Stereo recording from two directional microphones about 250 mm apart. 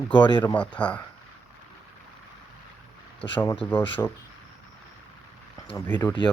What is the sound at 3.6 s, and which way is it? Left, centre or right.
Speech, centre.